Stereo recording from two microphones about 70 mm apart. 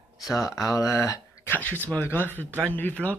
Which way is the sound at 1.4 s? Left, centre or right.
Left.